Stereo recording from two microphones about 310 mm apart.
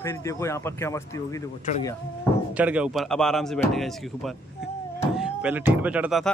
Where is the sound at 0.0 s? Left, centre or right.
Centre.